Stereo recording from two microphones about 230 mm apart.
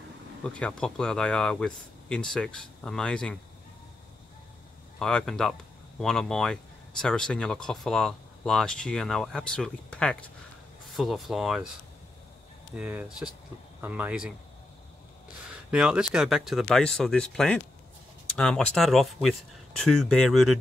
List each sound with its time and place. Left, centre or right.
0.6 s speech: centre
4.9 s speech: centre
12.7 s speech: centre
15.7 s speech: centre